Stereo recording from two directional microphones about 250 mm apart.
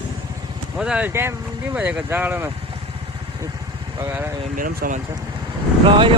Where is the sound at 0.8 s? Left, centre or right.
Centre.